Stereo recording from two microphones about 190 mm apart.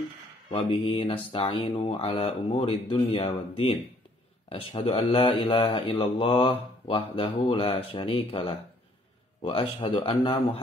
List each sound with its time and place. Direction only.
0.5 s speech: 30° left (ahead or behind)